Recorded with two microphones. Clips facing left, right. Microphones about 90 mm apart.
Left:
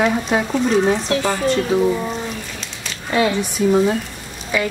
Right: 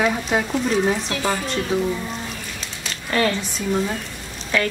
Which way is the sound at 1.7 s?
Centre (ahead or behind).